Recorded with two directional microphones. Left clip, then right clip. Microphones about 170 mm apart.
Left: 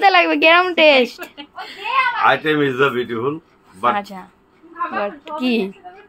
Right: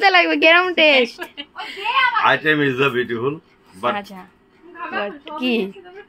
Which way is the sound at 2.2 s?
5° right (ahead or behind).